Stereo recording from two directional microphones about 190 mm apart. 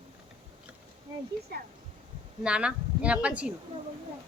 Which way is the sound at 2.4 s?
5° right (ahead or behind).